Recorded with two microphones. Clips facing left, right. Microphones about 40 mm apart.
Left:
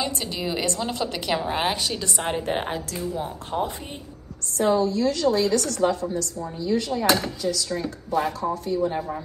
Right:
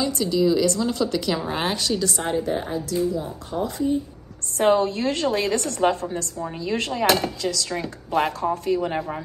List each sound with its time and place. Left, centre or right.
0.0 s a woman's voice: left
1.4 s a woman's voice: centre
2.0 s a woman's voice: left
2.4 s speech: left
4.6 s a woman's voice: right
6.6 s speech: right
7.4 s speech: right
8.5 s speech: right